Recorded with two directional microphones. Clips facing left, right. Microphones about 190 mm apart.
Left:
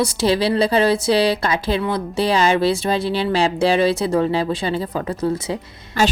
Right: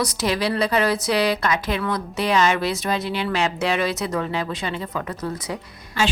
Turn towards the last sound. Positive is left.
turn(degrees=45)  # may be behind; listen again after turning